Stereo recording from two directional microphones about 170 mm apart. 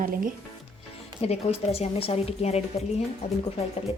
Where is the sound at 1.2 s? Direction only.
40° left (ahead or behind).